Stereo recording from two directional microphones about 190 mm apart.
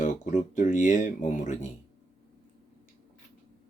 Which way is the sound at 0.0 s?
40° left (ahead or behind).